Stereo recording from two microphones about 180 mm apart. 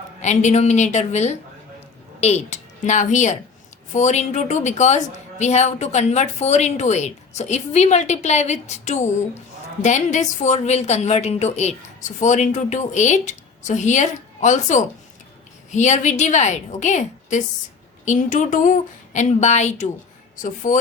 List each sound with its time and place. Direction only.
0.2 s speech: 40° left (ahead or behind)